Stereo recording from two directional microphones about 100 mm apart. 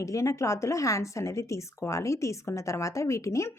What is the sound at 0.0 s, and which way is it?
Speech, 30° left (ahead or behind).